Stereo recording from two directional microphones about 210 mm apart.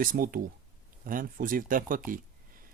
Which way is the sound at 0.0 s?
40° right (ahead or behind).